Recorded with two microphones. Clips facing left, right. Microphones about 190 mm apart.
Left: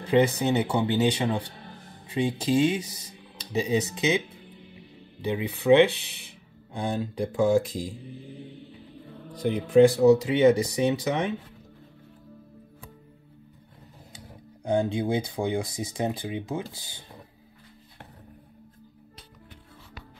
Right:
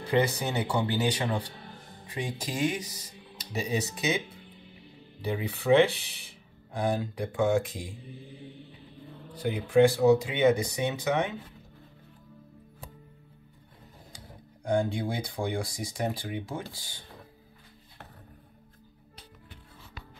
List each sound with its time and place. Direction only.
0.1 s speech: 25° left (ahead or behind)
5.2 s speech: 20° left (ahead or behind)
9.9 s speech: 35° left (ahead or behind)
14.6 s speech: 20° left (ahead or behind)